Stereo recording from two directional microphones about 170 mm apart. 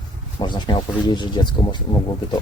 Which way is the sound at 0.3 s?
25° left (ahead or behind).